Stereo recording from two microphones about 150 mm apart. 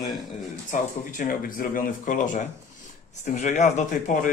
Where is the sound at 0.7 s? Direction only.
65° left (ahead or behind).